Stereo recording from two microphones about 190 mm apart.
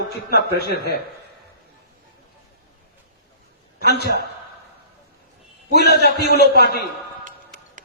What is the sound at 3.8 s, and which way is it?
Speech, 60° left (ahead or behind).